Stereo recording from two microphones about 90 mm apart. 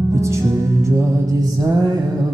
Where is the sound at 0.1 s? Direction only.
30° right (ahead or behind).